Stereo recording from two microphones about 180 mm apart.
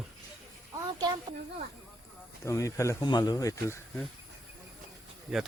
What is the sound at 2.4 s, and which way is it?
Speech, 15° left (ahead or behind).